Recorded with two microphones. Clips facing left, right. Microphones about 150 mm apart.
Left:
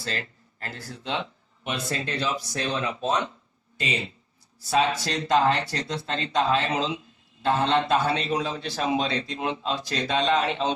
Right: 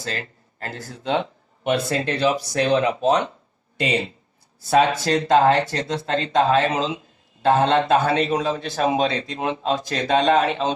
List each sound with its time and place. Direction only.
0.6 s a man's voice: 50° right (ahead or behind)